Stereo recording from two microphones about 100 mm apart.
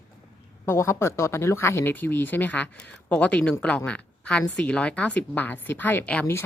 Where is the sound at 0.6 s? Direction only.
25° left (ahead or behind).